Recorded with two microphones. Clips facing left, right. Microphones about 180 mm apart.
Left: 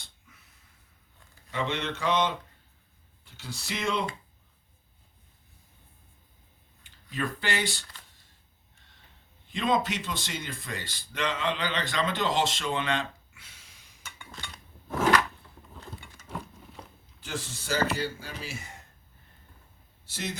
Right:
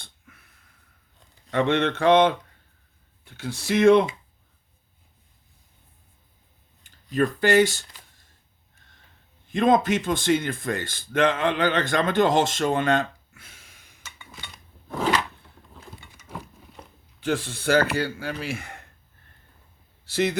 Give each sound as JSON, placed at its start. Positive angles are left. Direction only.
{"t": 1.5, "sound": "speech", "side_deg": -60}
{"t": 6.8, "sound": "speech", "side_deg": -45}
{"t": 8.8, "sound": "a sound", "side_deg": -50}
{"t": 9.5, "sound": "speech", "side_deg": -50}
{"t": 17.2, "sound": "speech", "side_deg": -60}
{"t": 20.1, "sound": "speech", "side_deg": -70}